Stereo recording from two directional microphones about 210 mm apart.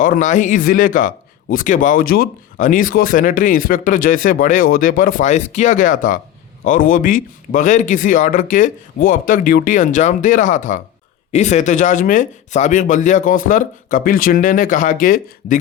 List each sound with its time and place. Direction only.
0.0 s speech: 40° left (ahead or behind)